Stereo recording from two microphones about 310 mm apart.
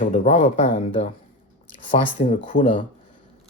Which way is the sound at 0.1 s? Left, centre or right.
Left.